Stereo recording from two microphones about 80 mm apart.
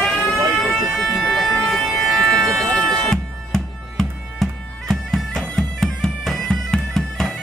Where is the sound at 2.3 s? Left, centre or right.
Centre.